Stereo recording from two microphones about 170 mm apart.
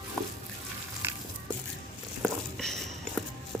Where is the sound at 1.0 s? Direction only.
15° right (ahead or behind).